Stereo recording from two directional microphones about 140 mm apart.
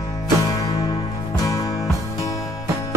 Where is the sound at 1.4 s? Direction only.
25° left (ahead or behind).